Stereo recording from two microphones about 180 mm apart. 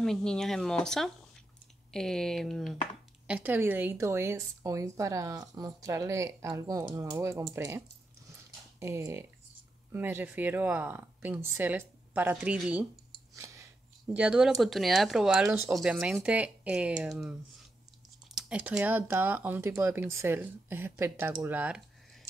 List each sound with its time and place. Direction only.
0.0 s speech: 5° left (ahead or behind)
3.3 s a woman's voice: 10° right (ahead or behind)
13.3 s a sound: 15° right (ahead or behind)
14.1 s a woman's voice: 5° right (ahead or behind)